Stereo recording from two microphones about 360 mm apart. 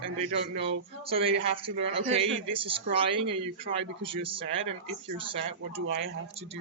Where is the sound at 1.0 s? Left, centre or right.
Centre.